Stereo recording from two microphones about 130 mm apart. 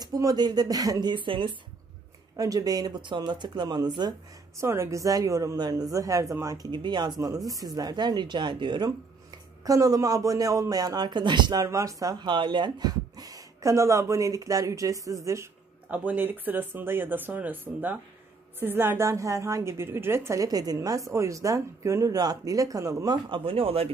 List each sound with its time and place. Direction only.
0.0 s speech: 30° right (ahead or behind)
2.3 s speech: 25° right (ahead or behind)
4.6 s a man's voice: 20° right (ahead or behind)
23.3 s speech: 45° right (ahead or behind)